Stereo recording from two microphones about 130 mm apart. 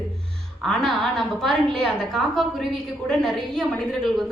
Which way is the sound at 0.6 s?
Centre (ahead or behind).